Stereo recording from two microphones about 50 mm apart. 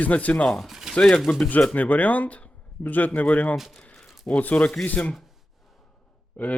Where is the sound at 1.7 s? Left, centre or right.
Left.